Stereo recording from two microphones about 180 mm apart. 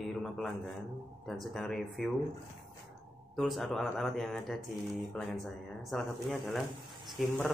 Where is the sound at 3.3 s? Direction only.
Centre (ahead or behind).